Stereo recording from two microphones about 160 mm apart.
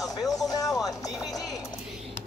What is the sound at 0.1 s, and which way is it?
Music, 20° left (ahead or behind).